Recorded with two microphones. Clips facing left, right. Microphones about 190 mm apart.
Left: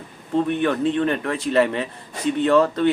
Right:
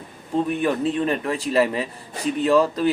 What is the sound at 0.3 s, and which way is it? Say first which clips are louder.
Speech: left 1 dB; 5° right (ahead or behind).